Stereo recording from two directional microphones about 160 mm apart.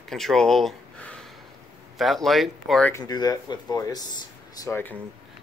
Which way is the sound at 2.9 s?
25° left (ahead or behind).